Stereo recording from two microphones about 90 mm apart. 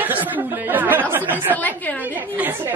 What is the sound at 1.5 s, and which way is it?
Speech, 20° left (ahead or behind).